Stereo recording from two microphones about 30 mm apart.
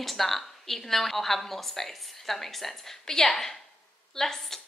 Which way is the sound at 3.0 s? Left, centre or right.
Centre.